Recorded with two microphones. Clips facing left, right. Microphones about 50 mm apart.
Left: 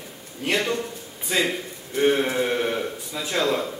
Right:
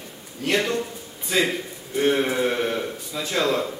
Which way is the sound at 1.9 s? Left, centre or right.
Centre.